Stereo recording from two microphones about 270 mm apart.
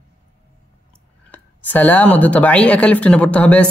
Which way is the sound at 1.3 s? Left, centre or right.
Centre.